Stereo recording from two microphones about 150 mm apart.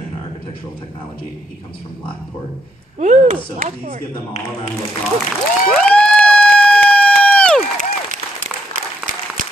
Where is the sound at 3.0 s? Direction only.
55° right (ahead or behind).